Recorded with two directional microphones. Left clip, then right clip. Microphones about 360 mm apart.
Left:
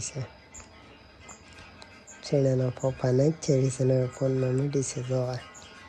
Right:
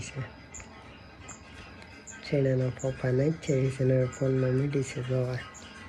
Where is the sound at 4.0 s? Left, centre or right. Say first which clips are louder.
Left 1 dB; centre.